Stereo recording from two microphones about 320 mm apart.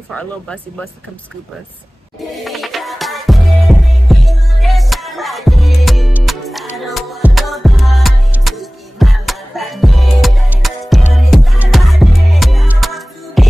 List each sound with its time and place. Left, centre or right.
0.1 s speech: centre
2.4 s music: centre